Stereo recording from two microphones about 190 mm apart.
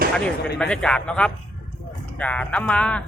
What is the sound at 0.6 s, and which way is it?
Speech, 5° left (ahead or behind).